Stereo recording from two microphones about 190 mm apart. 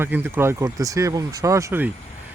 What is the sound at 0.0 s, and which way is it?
Speech, 10° right (ahead or behind).